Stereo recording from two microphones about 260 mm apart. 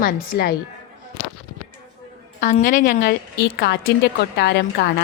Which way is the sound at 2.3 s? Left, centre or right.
Left.